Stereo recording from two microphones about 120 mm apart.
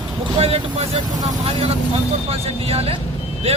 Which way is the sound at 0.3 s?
55° right (ahead or behind).